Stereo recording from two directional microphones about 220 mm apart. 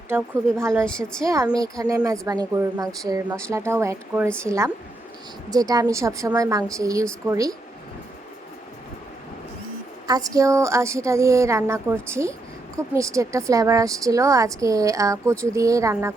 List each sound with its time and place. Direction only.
0.1 s a woman's voice: 10° right (ahead or behind)
0.9 s a woman's voice: 5° left (ahead or behind)
1.2 s a woman's voice: 15° right (ahead or behind)
10.1 s a woman's voice: 15° right (ahead or behind)